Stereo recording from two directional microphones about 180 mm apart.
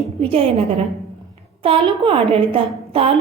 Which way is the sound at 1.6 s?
30° right (ahead or behind).